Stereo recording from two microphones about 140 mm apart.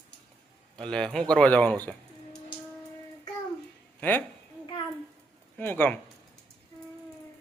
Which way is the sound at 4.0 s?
10° left (ahead or behind).